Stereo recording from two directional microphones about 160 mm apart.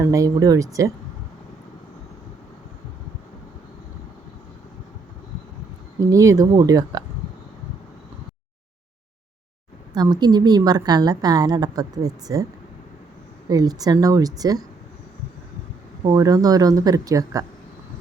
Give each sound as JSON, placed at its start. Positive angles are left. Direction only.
{"t": 0.0, "sound": "a woman's voice", "side_deg": -20}
{"t": 6.1, "sound": "a woman's voice", "side_deg": -20}
{"t": 9.9, "sound": "a woman's voice", "side_deg": -25}
{"t": 13.5, "sound": "a woman's voice", "side_deg": -25}
{"t": 16.0, "sound": "a woman's voice", "side_deg": -20}